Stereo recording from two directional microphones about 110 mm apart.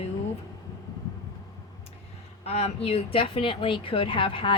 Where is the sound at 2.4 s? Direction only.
75° left (ahead or behind).